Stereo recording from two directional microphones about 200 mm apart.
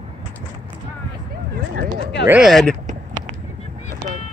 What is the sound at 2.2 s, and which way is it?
Speech, 5° right (ahead or behind).